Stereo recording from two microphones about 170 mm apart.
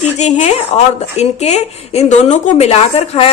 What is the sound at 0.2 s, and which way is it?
Speech, 45° left (ahead or behind).